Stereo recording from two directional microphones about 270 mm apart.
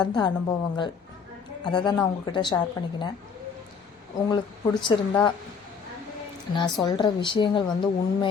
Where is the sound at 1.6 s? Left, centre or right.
Centre.